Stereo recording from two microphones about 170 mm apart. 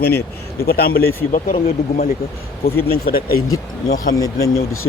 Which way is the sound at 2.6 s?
65° left (ahead or behind).